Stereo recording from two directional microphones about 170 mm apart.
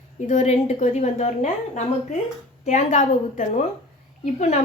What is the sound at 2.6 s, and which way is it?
A woman's voice, 45° left (ahead or behind).